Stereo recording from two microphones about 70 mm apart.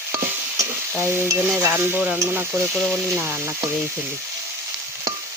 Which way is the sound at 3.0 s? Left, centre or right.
Right.